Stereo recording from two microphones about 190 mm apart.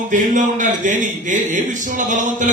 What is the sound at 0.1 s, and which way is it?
A man's voice, 40° right (ahead or behind).